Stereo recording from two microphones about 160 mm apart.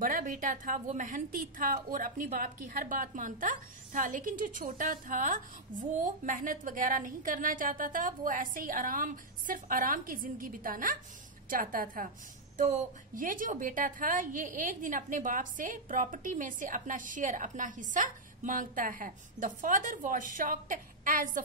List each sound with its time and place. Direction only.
0.0 s a woman's voice: 55° right (ahead or behind)